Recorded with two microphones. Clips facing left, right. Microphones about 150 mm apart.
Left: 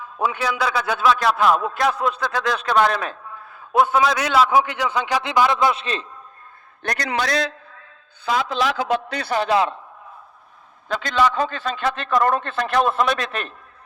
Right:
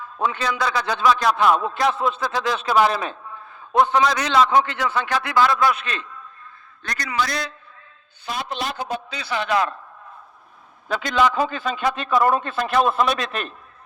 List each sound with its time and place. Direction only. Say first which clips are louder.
0.0 s a man's voice: left 1 dB; 10° left (ahead or behind); by 6.1 s 30° left (ahead or behind)
6.8 s a man's voice: left 2 dB; 65° left (ahead or behind)
9.3 s a man's voice: left 3 dB; 35° left (ahead or behind)
10.9 s a man's voice: even; 10° right (ahead or behind)